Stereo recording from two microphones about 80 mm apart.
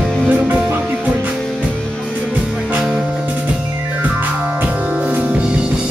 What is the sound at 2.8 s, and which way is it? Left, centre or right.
Music, centre.